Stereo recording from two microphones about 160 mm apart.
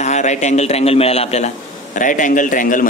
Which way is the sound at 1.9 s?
55° left (ahead or behind).